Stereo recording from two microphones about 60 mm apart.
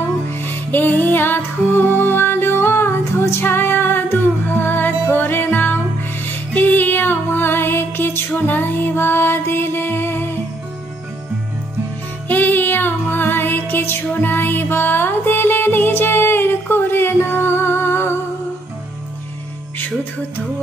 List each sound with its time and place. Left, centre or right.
0.5 s music: left
12.3 s music: left